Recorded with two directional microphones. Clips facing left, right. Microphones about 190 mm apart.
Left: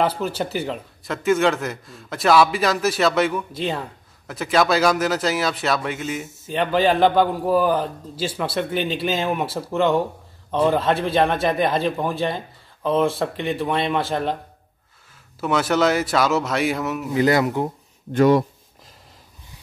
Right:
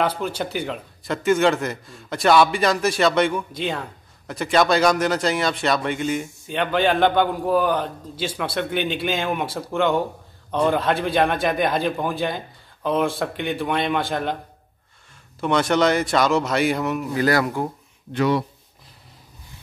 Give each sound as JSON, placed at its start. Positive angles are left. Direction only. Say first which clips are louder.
{"t": 0.0, "sound": "a man's voice", "louder": "left 1 dB", "side_deg": 5}
{"t": 15.4, "sound": "a man's voice", "louder": "even", "side_deg": 5}
{"t": 17.1, "sound": "speech", "louder": "left 4 dB", "side_deg": 20}
{"t": 18.1, "sound": "speech", "louder": "left 5 dB", "side_deg": 45}